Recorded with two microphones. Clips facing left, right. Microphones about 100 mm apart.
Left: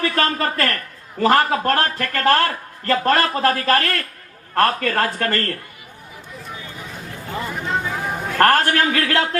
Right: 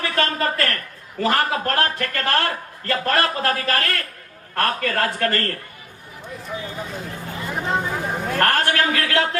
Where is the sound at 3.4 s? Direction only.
35° left (ahead or behind).